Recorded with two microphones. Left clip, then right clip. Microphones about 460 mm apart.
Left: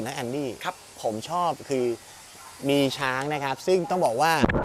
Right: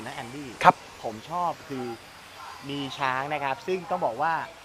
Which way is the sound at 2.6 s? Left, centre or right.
Left.